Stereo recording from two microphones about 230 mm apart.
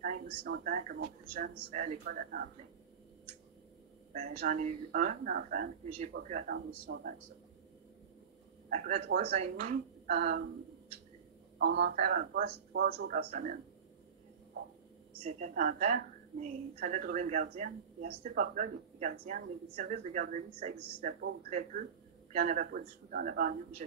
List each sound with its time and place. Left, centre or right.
0.0 s a woman's voice: right
4.4 s a woman's voice: right
8.7 s a woman's voice: right
11.5 s speech: right
12.0 s a woman's voice: right
15.2 s a woman's voice: right